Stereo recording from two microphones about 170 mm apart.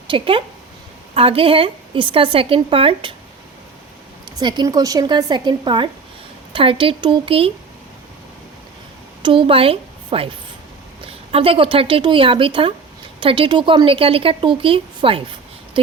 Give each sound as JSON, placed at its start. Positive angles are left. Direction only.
{"t": 0.1, "sound": "a woman's voice", "side_deg": -30}
{"t": 4.3, "sound": "a woman's voice", "side_deg": -25}
{"t": 9.2, "sound": "a woman's voice", "side_deg": -30}